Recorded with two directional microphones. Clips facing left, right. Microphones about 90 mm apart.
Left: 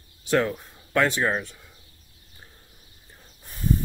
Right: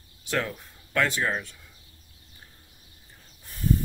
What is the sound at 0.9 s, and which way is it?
Speech, 25° left (ahead or behind).